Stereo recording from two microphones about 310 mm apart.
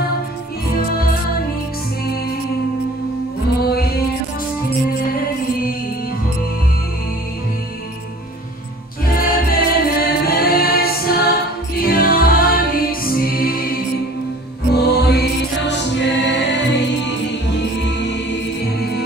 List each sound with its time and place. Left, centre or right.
9.0 s music: left